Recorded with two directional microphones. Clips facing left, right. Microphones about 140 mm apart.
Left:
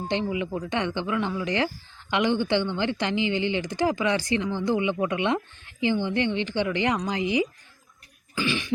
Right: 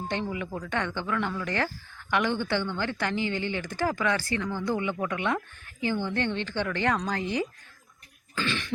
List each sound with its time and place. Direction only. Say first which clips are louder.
0.1 s speech: left 6 dB; 20° left (ahead or behind)
8.4 s cough: left 3 dB; 15° left (ahead or behind)